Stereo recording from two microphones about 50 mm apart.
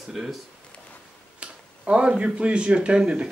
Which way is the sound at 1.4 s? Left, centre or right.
Right.